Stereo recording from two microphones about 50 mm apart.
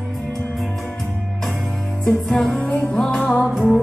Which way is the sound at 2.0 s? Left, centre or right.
Centre.